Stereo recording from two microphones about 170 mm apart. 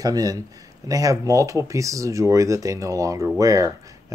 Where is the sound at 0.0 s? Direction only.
20° right (ahead or behind).